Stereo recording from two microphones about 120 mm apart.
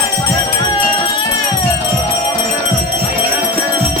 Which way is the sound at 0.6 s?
50° left (ahead or behind).